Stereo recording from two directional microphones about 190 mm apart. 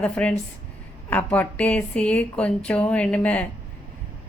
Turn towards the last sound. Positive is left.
turn(degrees=5)  # may be behind; listen again after turning